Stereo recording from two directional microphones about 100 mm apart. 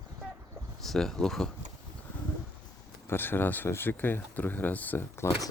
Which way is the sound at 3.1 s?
20° left (ahead or behind).